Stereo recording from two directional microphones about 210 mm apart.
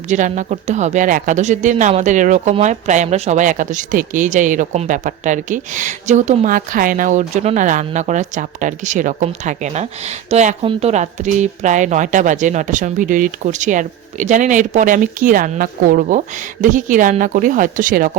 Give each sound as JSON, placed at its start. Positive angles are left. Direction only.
{"t": 0.1, "sound": "speech", "side_deg": -35}